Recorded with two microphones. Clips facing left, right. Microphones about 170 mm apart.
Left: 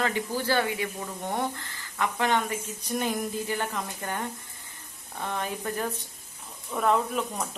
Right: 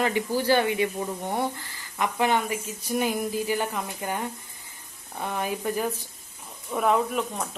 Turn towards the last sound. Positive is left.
turn(degrees=0)  # may be behind; listen again after turning